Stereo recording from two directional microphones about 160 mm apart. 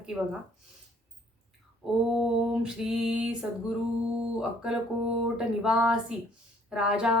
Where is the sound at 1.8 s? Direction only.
Centre (ahead or behind).